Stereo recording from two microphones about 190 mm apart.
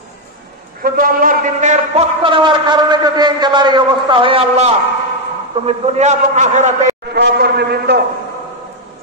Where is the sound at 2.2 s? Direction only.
25° right (ahead or behind).